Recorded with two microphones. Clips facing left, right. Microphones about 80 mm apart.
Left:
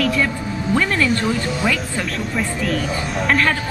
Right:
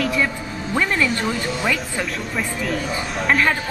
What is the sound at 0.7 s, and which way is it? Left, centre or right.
Speech, centre.